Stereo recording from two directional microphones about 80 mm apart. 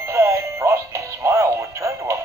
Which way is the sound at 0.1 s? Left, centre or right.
Right.